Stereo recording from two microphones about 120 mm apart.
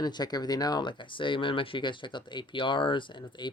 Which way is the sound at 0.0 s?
35° left (ahead or behind).